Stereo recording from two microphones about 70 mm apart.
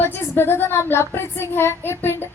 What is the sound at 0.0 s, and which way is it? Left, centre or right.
Speech, left.